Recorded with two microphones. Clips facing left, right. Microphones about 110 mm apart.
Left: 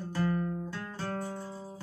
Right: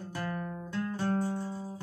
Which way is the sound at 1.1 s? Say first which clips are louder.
Right 5 dB; centre (ahead or behind).